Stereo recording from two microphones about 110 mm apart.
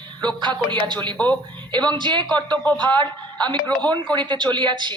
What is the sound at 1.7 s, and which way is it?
A man's voice, 45° right (ahead or behind).